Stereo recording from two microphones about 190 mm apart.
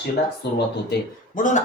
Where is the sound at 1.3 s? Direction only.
40° left (ahead or behind).